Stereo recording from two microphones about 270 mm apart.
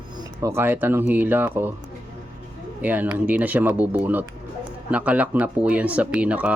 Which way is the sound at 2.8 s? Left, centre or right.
Centre.